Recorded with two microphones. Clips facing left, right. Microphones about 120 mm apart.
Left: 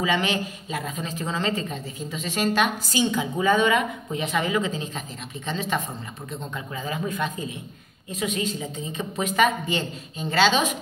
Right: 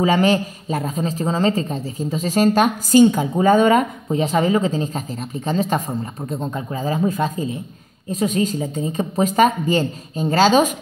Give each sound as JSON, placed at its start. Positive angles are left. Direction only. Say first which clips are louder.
{"t": 0.0, "sound": "a man's voice", "louder": "right 8 dB", "side_deg": -40}